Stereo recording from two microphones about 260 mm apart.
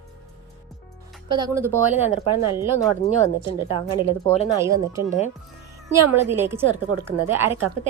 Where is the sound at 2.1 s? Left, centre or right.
Left.